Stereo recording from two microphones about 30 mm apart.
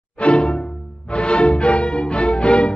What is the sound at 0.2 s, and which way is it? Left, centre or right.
Music, left.